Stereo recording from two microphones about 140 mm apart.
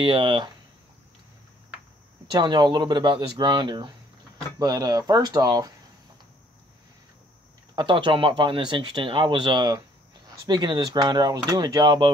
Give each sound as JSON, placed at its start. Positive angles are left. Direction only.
{"t": 0.0, "sound": "speech", "side_deg": -40}
{"t": 2.3, "sound": "speech", "side_deg": -35}
{"t": 7.7, "sound": "speech", "side_deg": -35}